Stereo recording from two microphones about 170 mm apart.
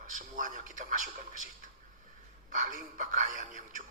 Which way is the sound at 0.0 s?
50° right (ahead or behind).